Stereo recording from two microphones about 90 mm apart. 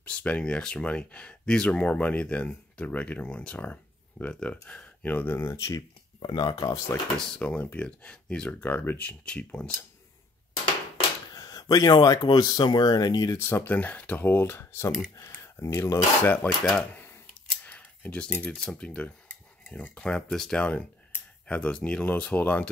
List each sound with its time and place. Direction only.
0.0 s speech: 15° left (ahead or behind); by 5.9 s 35° left (ahead or behind)
6.1 s speech: 55° left (ahead or behind); by 7.0 s 40° left (ahead or behind)
7.2 s speech: 10° left (ahead or behind)
11.3 s speech: 45° left (ahead or behind)
13.4 s speech: 25° left (ahead or behind)
16.9 s a sound: 20° left (ahead or behind)
20.0 s speech: 10° left (ahead or behind)